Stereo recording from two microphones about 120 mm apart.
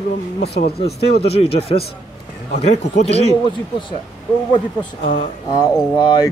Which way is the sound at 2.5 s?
75° left (ahead or behind).